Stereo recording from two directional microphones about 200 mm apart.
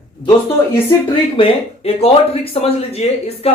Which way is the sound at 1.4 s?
30° left (ahead or behind).